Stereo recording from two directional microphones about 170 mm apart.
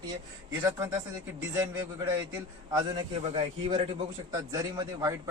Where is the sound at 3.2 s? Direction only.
35° right (ahead or behind).